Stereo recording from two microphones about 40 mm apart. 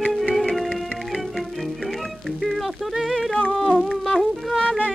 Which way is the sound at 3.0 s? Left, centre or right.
Centre.